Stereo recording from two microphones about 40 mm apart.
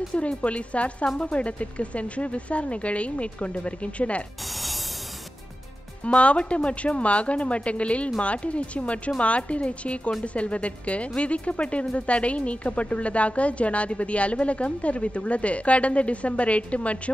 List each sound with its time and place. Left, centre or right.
0.1 s speech: left
6.0 s speech: left